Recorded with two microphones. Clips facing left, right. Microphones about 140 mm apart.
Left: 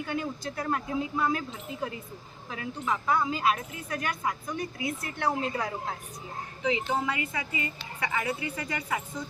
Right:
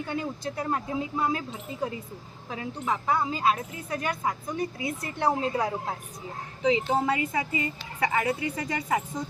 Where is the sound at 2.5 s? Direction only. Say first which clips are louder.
Right 1 dB; 25° right (ahead or behind).